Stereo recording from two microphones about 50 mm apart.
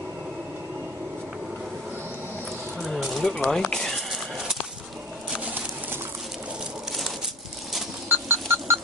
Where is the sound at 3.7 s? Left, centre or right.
Centre.